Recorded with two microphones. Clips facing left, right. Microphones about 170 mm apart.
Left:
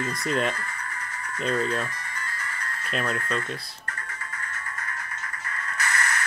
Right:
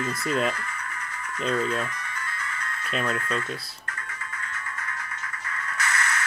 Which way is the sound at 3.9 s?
40° left (ahead or behind).